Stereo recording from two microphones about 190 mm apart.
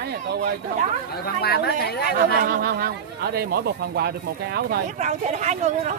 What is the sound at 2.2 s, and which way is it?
Speech, 50° right (ahead or behind).